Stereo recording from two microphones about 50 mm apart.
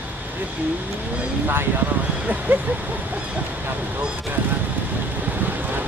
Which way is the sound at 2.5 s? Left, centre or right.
Right.